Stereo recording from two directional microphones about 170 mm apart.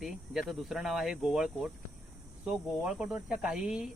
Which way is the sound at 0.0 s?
Centre (ahead or behind).